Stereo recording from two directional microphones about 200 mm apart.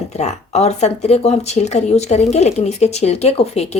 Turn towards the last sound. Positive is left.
turn(degrees=30)  # may be behind; listen again after turning